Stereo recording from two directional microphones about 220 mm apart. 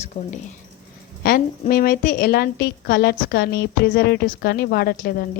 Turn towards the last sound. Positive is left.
turn(degrees=45)  # may be behind; listen again after turning